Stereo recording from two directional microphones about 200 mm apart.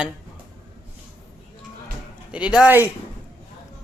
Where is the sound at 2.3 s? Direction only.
5° right (ahead or behind).